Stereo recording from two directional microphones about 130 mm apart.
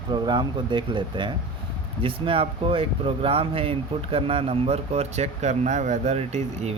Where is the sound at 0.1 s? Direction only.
35° right (ahead or behind).